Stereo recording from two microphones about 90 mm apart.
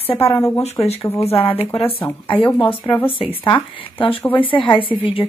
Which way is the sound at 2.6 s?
75° left (ahead or behind).